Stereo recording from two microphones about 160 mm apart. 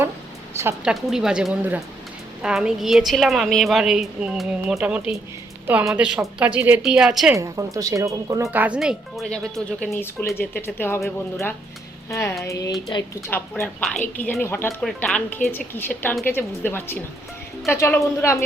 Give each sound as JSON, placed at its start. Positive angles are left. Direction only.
{"t": 0.9, "sound": "a woman's voice", "side_deg": -5}
{"t": 7.3, "sound": "speech", "side_deg": -20}
{"t": 8.4, "sound": "speech", "side_deg": -10}
{"t": 12.1, "sound": "music", "side_deg": 20}
{"t": 13.3, "sound": "speech", "side_deg": 10}